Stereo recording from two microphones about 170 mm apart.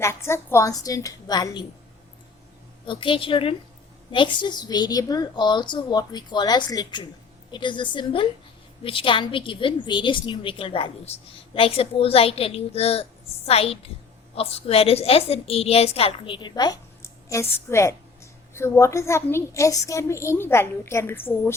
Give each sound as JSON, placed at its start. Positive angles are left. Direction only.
{"t": 0.0, "sound": "a woman's voice", "side_deg": 15}
{"t": 2.8, "sound": "a woman's voice", "side_deg": 30}